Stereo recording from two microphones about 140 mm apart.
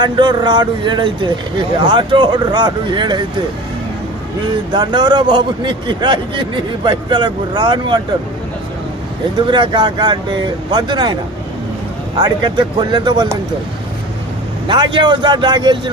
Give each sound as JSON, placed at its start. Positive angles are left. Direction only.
{"t": 0.0, "sound": "a man's voice", "side_deg": -30}
{"t": 4.7, "sound": "a man's voice", "side_deg": -30}
{"t": 9.5, "sound": "a man's voice", "side_deg": -35}
{"t": 12.1, "sound": "a man's voice", "side_deg": -35}
{"t": 14.7, "sound": "a man's voice", "side_deg": -35}